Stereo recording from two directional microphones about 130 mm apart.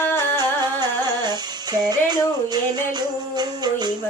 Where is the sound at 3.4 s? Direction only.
30° right (ahead or behind).